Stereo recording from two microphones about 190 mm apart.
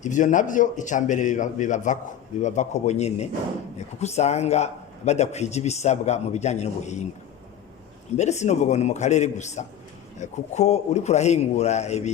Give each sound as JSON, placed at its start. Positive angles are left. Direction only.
{"t": 0.0, "sound": "speech", "side_deg": 40}
{"t": 8.1, "sound": "speech", "side_deg": 35}